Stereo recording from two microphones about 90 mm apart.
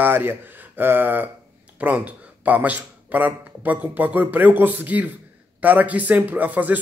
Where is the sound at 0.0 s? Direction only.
25° right (ahead or behind).